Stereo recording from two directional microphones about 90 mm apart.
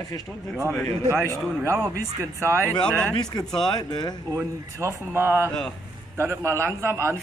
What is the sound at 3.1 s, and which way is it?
Speech, 50° left (ahead or behind).